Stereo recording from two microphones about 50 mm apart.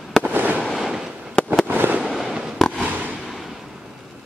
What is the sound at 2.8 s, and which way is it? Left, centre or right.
Fireworks, right.